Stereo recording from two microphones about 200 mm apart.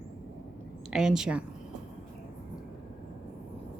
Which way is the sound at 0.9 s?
5° right (ahead or behind).